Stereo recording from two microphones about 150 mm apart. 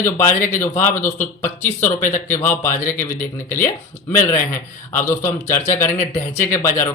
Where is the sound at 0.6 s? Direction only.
15° left (ahead or behind).